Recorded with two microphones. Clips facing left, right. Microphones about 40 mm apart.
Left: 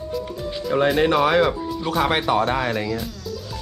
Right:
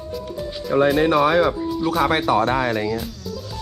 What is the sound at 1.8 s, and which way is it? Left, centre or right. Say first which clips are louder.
Speech: right 2 dB; centre.